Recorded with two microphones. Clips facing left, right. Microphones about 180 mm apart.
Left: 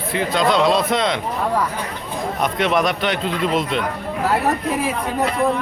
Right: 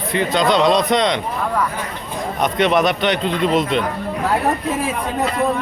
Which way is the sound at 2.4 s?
Centre (ahead or behind).